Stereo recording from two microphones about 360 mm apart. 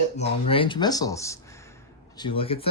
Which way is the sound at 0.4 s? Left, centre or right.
Centre.